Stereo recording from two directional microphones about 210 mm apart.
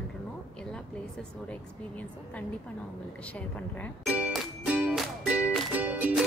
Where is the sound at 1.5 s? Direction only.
5° left (ahead or behind).